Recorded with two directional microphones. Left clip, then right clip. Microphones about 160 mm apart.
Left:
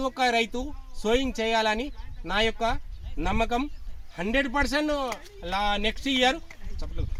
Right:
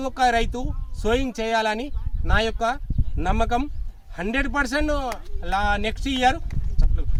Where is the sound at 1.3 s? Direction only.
35° right (ahead or behind).